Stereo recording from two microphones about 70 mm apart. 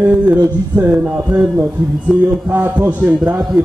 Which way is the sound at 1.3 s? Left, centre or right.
Right.